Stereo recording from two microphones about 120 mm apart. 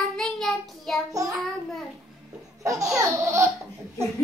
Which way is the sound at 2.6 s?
25° right (ahead or behind).